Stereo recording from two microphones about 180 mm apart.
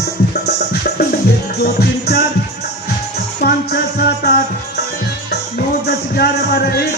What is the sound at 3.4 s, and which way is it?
Music, 60° left (ahead or behind).